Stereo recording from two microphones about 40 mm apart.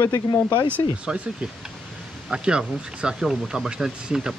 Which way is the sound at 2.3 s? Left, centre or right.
Right.